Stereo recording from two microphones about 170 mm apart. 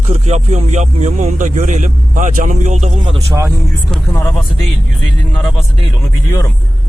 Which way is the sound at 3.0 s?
35° right (ahead or behind).